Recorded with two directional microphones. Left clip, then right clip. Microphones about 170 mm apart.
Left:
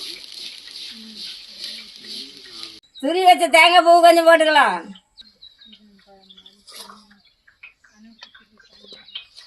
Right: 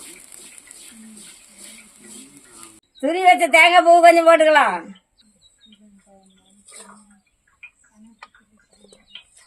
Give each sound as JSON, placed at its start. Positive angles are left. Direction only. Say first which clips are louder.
{"t": 3.0, "sound": "a man's voice", "louder": "even", "side_deg": -15}